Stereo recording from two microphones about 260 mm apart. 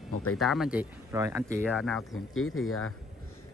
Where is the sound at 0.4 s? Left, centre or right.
Centre.